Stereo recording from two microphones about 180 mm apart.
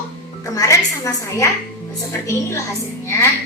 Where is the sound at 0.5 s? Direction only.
20° left (ahead or behind).